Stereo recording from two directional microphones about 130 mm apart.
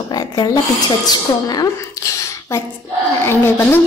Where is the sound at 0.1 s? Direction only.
30° left (ahead or behind).